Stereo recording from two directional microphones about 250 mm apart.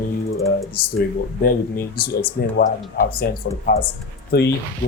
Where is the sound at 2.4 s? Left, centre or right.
Left.